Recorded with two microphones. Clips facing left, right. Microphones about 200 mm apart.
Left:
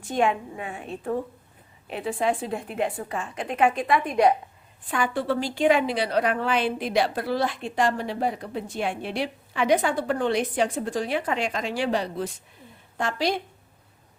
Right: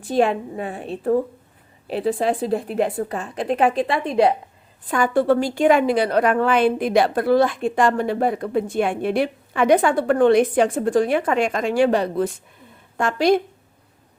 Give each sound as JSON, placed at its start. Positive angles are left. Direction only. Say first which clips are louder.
{"t": 0.0, "sound": "a woman's voice", "louder": "right 5 dB", "side_deg": -35}
{"t": 4.9, "sound": "a woman's voice", "louder": "right 8 dB", "side_deg": -45}